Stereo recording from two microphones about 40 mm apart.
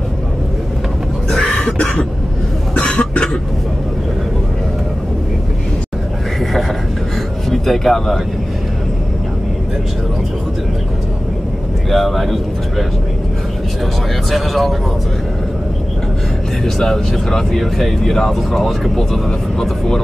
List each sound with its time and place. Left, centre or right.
1.4 s cough: centre
7.6 s speech: centre
11.9 s speech: centre
14.3 s speech: centre
16.6 s speech: centre